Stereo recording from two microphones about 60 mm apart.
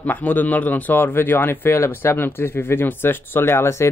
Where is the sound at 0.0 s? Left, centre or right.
Left.